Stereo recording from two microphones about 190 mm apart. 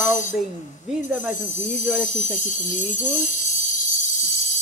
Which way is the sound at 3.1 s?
40° left (ahead or behind).